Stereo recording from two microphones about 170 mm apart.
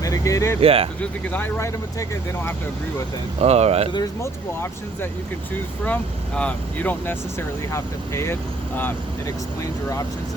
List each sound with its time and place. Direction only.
0.0 s vehicle: 20° left (ahead or behind)
0.6 s speech: 35° right (ahead or behind)
1.0 s speech: 10° left (ahead or behind)
3.4 s speech: 40° right (ahead or behind)
3.9 s speech: 15° left (ahead or behind)